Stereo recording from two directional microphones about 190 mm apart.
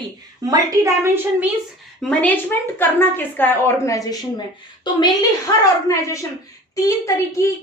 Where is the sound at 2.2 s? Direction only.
10° left (ahead or behind).